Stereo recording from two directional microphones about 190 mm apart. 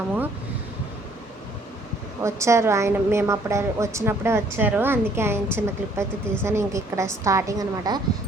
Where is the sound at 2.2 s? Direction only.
15° right (ahead or behind).